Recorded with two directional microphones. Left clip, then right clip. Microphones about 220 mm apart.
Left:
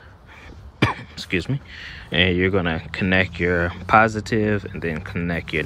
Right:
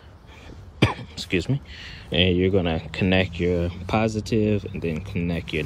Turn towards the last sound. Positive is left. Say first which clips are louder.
# left 3 dB
turn(degrees=-10)  # may be behind; listen again after turning